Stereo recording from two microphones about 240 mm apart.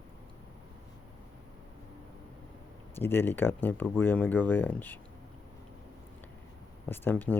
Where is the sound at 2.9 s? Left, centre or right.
Centre.